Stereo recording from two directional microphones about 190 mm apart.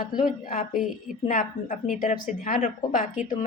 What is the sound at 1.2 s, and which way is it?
A woman's voice, 45° left (ahead or behind).